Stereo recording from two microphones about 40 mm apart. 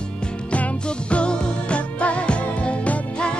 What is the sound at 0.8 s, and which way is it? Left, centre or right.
Music, left.